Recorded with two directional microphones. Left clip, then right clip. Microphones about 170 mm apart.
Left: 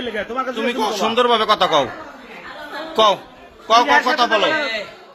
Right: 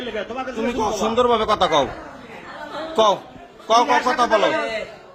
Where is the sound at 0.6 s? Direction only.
10° right (ahead or behind).